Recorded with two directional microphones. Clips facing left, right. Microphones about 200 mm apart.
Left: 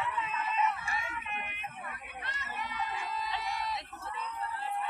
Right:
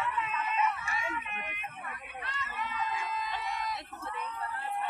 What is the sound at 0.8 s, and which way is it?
Dog, 35° left (ahead or behind).